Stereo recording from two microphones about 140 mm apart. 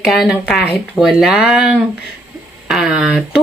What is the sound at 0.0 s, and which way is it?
Speech, centre (ahead or behind).